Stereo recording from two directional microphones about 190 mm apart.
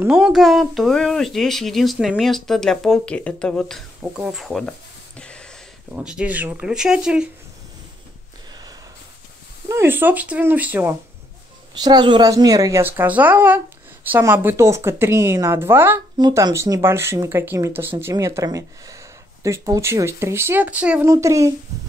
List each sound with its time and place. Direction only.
0.0 s speech: 5° right (ahead or behind)
4.0 s a sound: 5° right (ahead or behind)
5.9 s speech: 5° right (ahead or behind)
9.7 s a woman's voice: 10° right (ahead or behind)
11.7 s a woman's voice: 20° right (ahead or behind)